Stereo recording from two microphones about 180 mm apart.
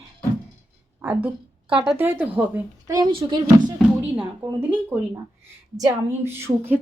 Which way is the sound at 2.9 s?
25° right (ahead or behind).